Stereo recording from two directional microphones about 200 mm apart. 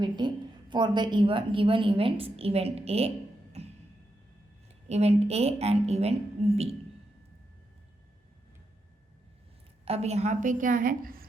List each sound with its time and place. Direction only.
0.0 s a woman's voice: 20° right (ahead or behind)
3.6 s music: 30° right (ahead or behind)
4.9 s a woman's voice: 30° right (ahead or behind)
9.8 s a woman's voice: 30° right (ahead or behind)